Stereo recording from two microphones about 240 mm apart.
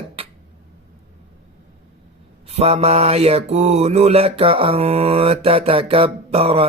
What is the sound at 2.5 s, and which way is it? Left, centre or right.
Mantra, right.